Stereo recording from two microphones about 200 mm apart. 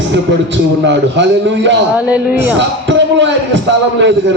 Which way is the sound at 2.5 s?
65° right (ahead or behind).